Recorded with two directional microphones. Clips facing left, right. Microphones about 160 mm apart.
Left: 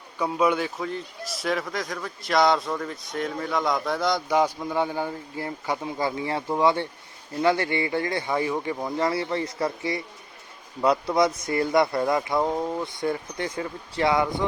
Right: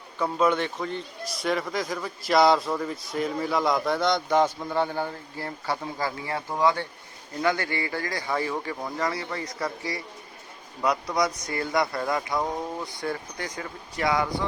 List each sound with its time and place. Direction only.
0.2 s a man's voice: 10° left (ahead or behind)